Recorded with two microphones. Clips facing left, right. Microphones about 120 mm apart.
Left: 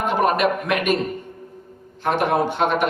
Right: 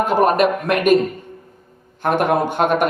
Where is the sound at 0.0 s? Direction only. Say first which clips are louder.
Right 4 dB; 40° right (ahead or behind).